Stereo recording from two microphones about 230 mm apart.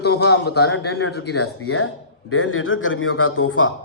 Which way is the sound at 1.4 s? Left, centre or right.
Left.